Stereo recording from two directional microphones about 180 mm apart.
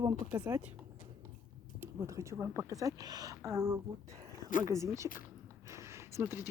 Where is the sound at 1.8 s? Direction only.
15° right (ahead or behind).